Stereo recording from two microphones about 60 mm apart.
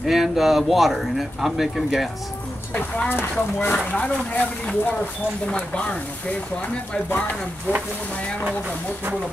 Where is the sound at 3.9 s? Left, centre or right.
Left.